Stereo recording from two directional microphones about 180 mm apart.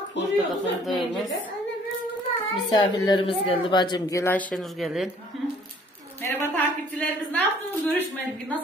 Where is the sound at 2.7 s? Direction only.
25° left (ahead or behind); by 5.1 s centre (ahead or behind).